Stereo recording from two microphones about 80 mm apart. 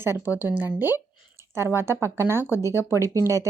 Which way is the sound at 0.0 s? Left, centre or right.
Right.